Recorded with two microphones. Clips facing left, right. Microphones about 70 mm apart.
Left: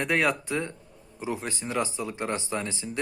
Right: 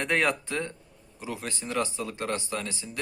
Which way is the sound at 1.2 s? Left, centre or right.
Left.